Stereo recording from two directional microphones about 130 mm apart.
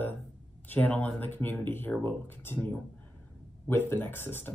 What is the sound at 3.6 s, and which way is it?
Speech, 15° left (ahead or behind).